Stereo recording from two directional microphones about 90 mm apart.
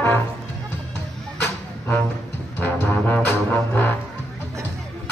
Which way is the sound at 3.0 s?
15° left (ahead or behind).